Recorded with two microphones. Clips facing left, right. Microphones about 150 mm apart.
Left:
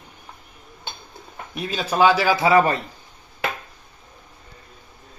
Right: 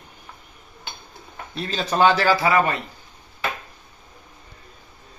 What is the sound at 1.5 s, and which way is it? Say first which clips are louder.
Speech: even; 10° left (ahead or behind).